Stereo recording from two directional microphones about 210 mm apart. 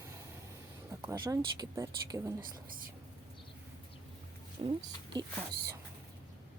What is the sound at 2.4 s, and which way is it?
Speech, 40° right (ahead or behind).